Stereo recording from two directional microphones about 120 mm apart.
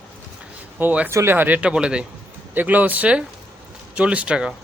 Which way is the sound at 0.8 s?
15° right (ahead or behind).